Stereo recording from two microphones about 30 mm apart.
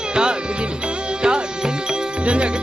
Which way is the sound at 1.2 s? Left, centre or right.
Right.